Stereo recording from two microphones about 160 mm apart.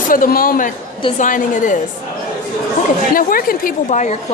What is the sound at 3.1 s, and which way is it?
A woman's voice, 60° left (ahead or behind).